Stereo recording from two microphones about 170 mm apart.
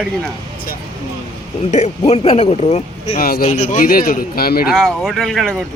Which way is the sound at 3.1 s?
60° left (ahead or behind).